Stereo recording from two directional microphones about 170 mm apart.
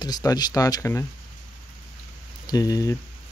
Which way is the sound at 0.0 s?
20° left (ahead or behind).